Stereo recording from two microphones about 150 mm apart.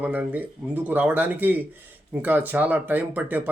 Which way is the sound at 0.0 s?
10° right (ahead or behind).